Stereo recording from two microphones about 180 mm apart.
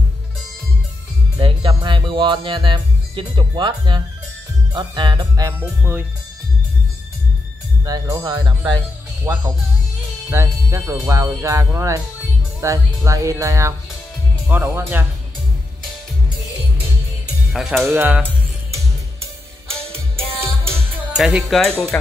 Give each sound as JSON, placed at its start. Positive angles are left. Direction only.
{"t": 1.4, "sound": "speech", "side_deg": -25}
{"t": 5.5, "sound": "speech", "side_deg": -10}
{"t": 7.8, "sound": "speech", "side_deg": -20}
{"t": 17.5, "sound": "speech", "side_deg": 0}
{"t": 17.8, "sound": "speech", "side_deg": -10}
{"t": 20.2, "sound": "music", "side_deg": -35}
{"t": 21.2, "sound": "speech", "side_deg": -5}